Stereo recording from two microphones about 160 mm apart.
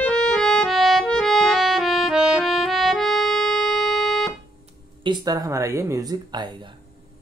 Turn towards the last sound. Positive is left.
turn(degrees=-25)  # may be behind; listen again after turning